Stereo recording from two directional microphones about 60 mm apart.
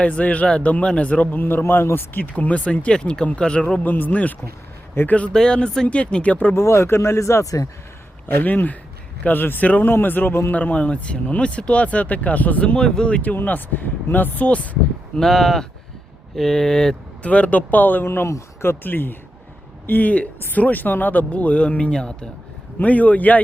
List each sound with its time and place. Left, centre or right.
0.0 s speech: left
2.2 s speech: left
3.8 s speech: left
5.0 s speech: left
5.3 s speech: centre
6.5 s speech: left
8.4 s speech: left
13.3 s speech: left
15.1 s speech: centre
17.2 s speech: left